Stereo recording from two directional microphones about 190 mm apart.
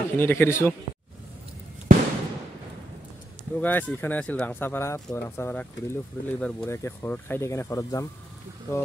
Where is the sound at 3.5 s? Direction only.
10° left (ahead or behind).